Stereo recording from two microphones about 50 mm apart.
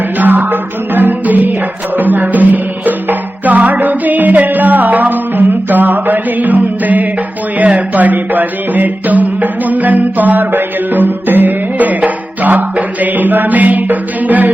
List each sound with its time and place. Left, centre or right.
0.2 s music: right
12.7 s mantra: right
13.9 s music: right